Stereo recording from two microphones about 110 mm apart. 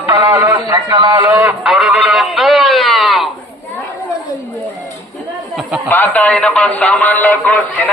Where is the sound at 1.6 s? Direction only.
5° right (ahead or behind).